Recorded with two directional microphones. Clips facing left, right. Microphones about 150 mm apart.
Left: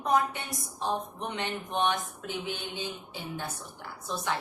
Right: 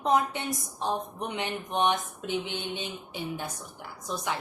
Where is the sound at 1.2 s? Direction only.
15° right (ahead or behind).